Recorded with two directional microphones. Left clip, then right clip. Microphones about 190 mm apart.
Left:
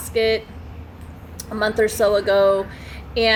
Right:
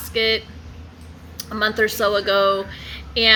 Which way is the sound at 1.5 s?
10° right (ahead or behind).